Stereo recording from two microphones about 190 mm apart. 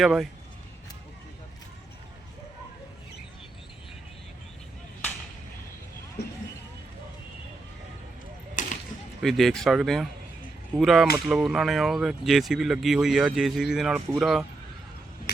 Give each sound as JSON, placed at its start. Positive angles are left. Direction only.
{"t": 0.0, "sound": "speech", "side_deg": 0}
{"t": 8.6, "sound": "a sound", "side_deg": 45}
{"t": 9.2, "sound": "speech", "side_deg": 0}